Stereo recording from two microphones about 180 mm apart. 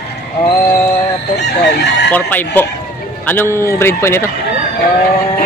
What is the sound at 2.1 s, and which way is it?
Speech, 10° left (ahead or behind).